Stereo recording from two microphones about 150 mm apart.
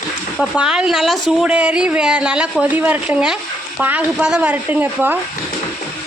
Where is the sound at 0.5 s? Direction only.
5° right (ahead or behind).